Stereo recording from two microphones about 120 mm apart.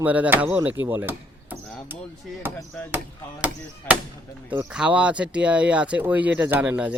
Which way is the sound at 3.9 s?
20° left (ahead or behind).